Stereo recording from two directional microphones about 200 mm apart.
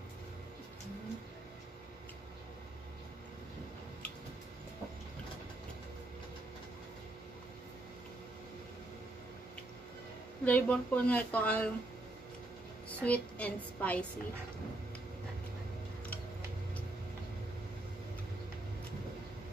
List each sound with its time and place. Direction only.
10.4 s speech: 5° left (ahead or behind)
13.0 s speech: 5° left (ahead or behind)